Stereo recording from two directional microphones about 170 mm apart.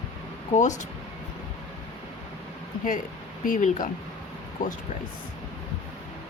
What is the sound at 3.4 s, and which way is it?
Speech, 50° left (ahead or behind).